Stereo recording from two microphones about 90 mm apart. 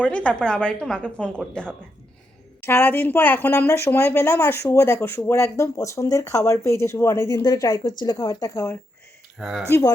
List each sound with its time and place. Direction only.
0.0 s a woman's voice: 15° left (ahead or behind)
2.6 s a woman's voice: 25° left (ahead or behind)
3.7 s a woman's voice: 30° left (ahead or behind)
9.4 s speech: centre (ahead or behind)
9.6 s speech: 35° left (ahead or behind)